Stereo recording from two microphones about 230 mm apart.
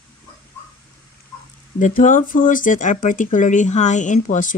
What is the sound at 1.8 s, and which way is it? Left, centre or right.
Speech, left.